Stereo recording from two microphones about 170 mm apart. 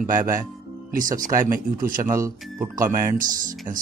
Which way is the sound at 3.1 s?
50° right (ahead or behind).